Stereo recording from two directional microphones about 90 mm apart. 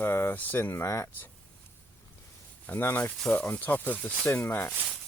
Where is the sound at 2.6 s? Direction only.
25° left (ahead or behind).